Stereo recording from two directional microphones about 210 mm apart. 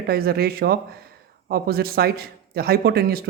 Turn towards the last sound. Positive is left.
turn(degrees=-45)  # may be behind; listen again after turning